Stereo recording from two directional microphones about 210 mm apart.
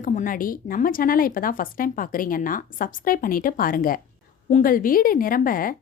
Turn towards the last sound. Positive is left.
turn(degrees=40)  # may be behind; listen again after turning